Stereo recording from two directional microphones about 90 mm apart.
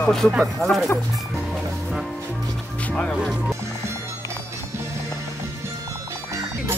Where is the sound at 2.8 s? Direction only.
15° left (ahead or behind).